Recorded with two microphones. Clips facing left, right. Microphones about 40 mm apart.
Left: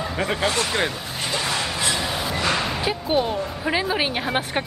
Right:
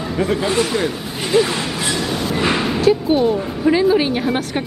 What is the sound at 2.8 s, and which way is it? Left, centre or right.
Speech, centre.